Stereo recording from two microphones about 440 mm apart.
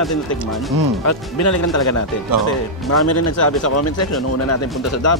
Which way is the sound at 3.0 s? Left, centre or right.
Left.